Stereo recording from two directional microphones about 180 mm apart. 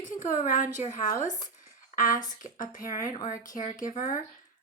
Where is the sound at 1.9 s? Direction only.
50° left (ahead or behind).